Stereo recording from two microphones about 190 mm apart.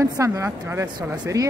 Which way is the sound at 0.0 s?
15° right (ahead or behind).